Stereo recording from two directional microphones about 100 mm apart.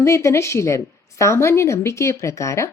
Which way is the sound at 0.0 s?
30° left (ahead or behind).